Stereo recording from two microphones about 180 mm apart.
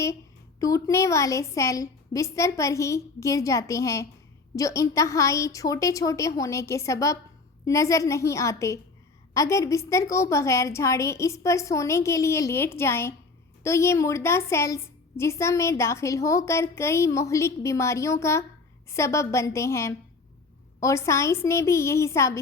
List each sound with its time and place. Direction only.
0.6 s a woman's voice: 15° left (ahead or behind)